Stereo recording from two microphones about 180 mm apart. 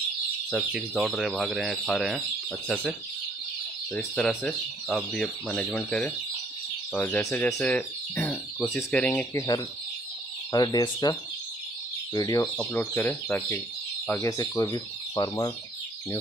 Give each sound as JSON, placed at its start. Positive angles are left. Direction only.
{"t": 0.5, "sound": "speech", "side_deg": 0}
{"t": 3.9, "sound": "speech", "side_deg": 5}
{"t": 10.5, "sound": "fowl", "side_deg": 20}
{"t": 12.1, "sound": "speech", "side_deg": 20}
{"t": 14.0, "sound": "fowl", "side_deg": 15}